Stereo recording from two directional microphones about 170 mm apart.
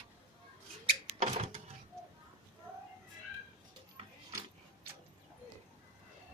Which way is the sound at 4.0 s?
35° right (ahead or behind).